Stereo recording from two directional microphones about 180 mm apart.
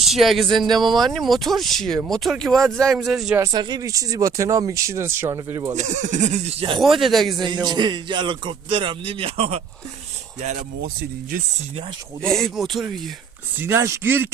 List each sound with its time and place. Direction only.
0.0 s speech: centre (ahead or behind)
3.3 s speech: 20° right (ahead or behind)
5.7 s speech: 40° right (ahead or behind)
6.7 s speech: centre (ahead or behind)
7.3 s a man's voice: 25° right (ahead or behind)
12.2 s speech: centre (ahead or behind)
13.6 s speech: 15° right (ahead or behind)